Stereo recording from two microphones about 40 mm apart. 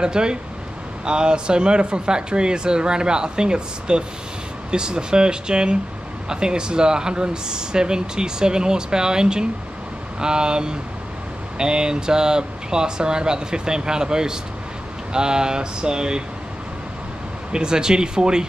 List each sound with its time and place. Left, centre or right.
0.0 s speech: right
17.5 s speech: centre